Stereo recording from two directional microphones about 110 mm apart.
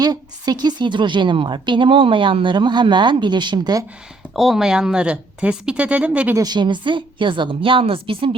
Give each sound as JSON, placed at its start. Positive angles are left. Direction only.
{"t": 0.0, "sound": "a woman's voice", "side_deg": -35}
{"t": 4.4, "sound": "speech", "side_deg": 0}
{"t": 6.3, "sound": "a woman's voice", "side_deg": -40}